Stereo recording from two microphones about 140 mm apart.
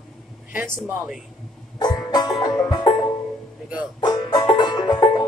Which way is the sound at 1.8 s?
30° left (ahead or behind).